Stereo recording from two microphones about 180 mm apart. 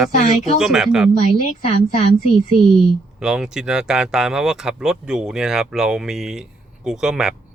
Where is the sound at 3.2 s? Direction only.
5° right (ahead or behind).